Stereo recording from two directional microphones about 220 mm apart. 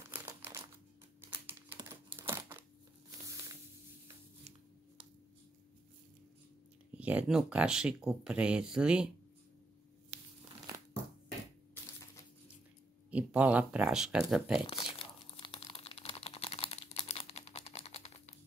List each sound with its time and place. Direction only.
0.1 s crumpling: 10° right (ahead or behind)
7.0 s speech: 5° right (ahead or behind)
10.1 s crumpling: 30° right (ahead or behind)
13.1 s speech: 5° right (ahead or behind)
14.6 s crumpling: 25° left (ahead or behind)